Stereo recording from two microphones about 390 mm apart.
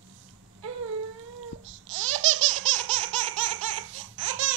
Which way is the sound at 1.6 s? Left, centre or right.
Right.